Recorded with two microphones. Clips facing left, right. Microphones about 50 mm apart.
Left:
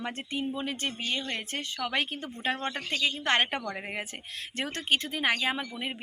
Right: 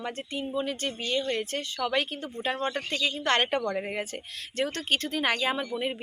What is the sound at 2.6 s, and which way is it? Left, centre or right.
Speech, centre.